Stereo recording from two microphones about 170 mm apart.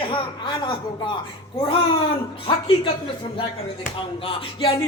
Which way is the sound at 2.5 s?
35° left (ahead or behind).